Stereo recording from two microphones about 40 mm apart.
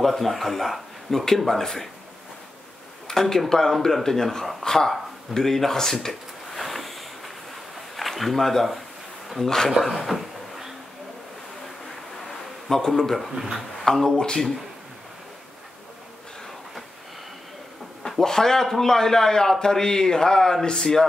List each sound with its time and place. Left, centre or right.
0.0 s a man's voice: centre
3.1 s speech: centre
6.6 s a sound: centre
7.9 s speech: centre
9.7 s a sound: centre
12.3 s a sound: centre
13.3 s speech: centre
13.8 s speech: centre
14.1 s speech: left
18.2 s speech: centre